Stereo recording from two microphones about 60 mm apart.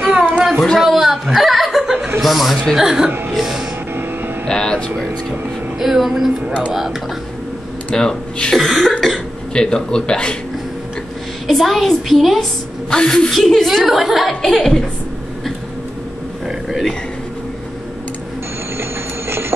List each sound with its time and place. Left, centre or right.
0.2 s child singing: right
0.7 s chuckle: centre
2.2 s a woman's voice: centre
4.5 s speech: centre
5.8 s a woman's voice: centre
7.9 s speech: centre
9.5 s speech: centre
11.4 s a woman's voice: centre
12.9 s speech: centre
13.3 s a woman's voice: centre
18.8 s sewing machine: right